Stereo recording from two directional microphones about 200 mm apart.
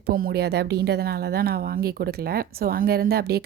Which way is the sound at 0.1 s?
50° right (ahead or behind).